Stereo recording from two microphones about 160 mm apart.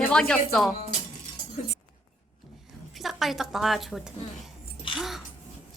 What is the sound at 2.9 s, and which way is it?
A woman's voice, centre (ahead or behind).